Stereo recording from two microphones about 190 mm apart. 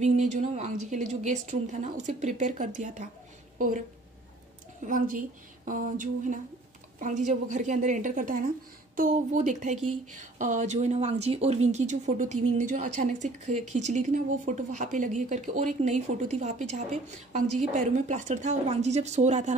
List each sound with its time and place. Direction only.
0.0 s a woman's voice: 40° right (ahead or behind)
4.8 s a sound: 45° right (ahead or behind)
7.0 s speech: 40° right (ahead or behind)